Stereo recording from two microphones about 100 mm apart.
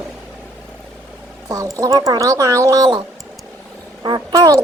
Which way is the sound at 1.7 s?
35° right (ahead or behind).